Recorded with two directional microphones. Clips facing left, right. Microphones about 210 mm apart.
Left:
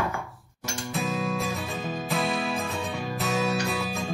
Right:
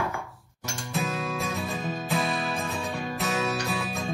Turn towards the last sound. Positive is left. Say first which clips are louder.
# left 2 dB
turn(degrees=0)  # may be behind; listen again after turning